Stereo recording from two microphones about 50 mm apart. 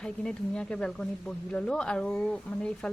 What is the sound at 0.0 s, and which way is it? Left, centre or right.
Speech, centre.